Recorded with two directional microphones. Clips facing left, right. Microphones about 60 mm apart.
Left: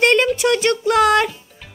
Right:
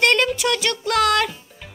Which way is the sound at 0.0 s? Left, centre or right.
Left.